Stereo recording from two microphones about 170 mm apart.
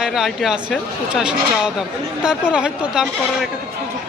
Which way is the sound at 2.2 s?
5° right (ahead or behind).